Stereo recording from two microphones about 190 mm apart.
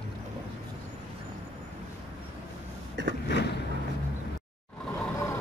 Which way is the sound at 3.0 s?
70° right (ahead or behind).